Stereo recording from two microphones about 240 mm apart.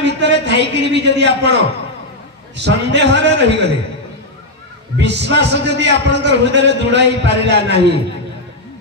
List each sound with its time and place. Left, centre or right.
0.0 s a man's voice: right
4.9 s a man's voice: right